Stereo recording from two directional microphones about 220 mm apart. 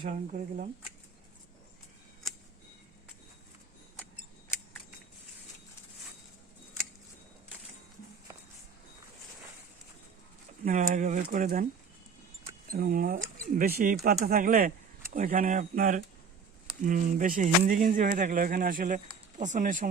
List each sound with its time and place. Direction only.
0.0 s speech: 35° right (ahead or behind)
10.7 s speech: 35° right (ahead or behind)
12.7 s speech: 40° right (ahead or behind)